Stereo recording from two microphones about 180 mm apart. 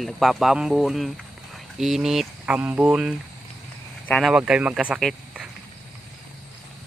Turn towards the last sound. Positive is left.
turn(degrees=0)  # may be behind; listen again after turning